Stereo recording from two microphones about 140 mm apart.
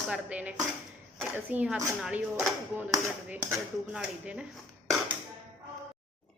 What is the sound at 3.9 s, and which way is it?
Speech, 10° right (ahead or behind).